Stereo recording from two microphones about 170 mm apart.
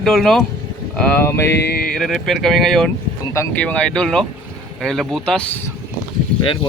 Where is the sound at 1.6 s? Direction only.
65° left (ahead or behind).